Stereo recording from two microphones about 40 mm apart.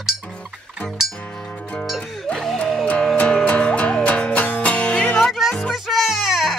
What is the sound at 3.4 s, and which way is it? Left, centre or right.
Music, left.